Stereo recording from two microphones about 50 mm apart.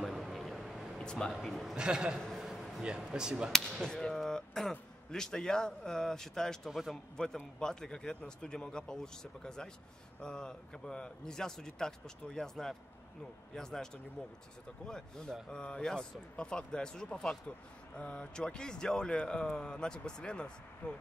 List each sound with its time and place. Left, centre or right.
0.0 s a sound: centre
0.9 s a sound: centre
1.3 s a man's voice: centre
1.8 s speech: centre
2.3 s a sound: centre
2.8 s speech: centre
3.8 s speech: centre
6.7 s a man's voice: centre
7.2 s speech: left
14.9 s speech: centre